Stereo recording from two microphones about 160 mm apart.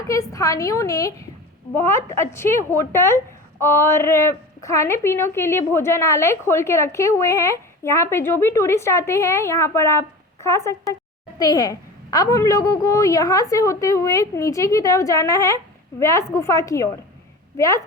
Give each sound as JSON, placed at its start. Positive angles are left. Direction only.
{"t": 0.1, "sound": "a woman's voice", "side_deg": 20}